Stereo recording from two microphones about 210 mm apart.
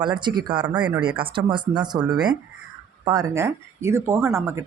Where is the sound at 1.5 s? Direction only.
20° right (ahead or behind).